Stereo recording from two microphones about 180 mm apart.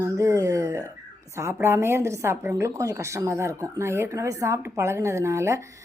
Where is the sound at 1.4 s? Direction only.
15° right (ahead or behind).